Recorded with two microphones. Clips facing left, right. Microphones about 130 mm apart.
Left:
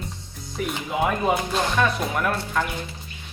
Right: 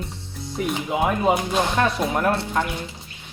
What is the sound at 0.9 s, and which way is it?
Speech, 20° right (ahead or behind).